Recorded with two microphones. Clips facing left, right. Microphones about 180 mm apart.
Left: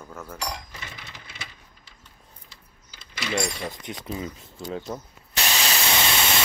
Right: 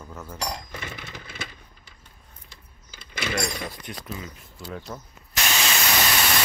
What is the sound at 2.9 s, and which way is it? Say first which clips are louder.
Keys jangling: right 2 dB; 55° right (ahead or behind).